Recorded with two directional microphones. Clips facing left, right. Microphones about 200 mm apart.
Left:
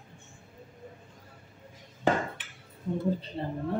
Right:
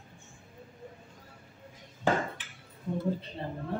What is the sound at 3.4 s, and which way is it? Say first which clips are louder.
Speech: left 4 dB; 25° left (ahead or behind).